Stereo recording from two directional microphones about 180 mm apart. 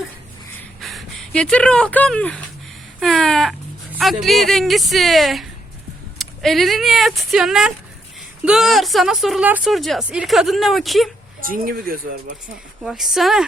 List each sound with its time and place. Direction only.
0.8 s speech: centre (ahead or behind)
3.0 s a sound: 5° left (ahead or behind)
3.9 s speech: centre (ahead or behind)
11.3 s speech: 50° right (ahead or behind)
12.8 s speech: centre (ahead or behind)